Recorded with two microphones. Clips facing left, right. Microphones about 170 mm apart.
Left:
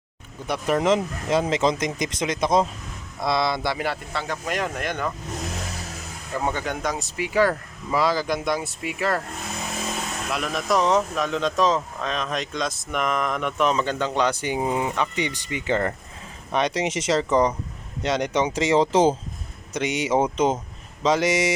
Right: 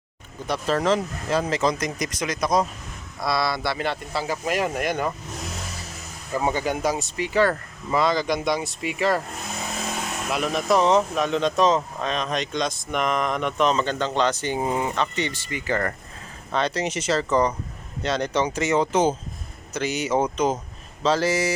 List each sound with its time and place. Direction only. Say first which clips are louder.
0.4 s speech: left 1 dB; 15° left (ahead or behind)
4.1 s speech: right 2 dB; 5° right (ahead or behind)
6.4 s speech: right 3 dB; 5° right (ahead or behind)
10.3 s speech: right 2 dB; centre (ahead or behind); by 21.5 s 20° left (ahead or behind)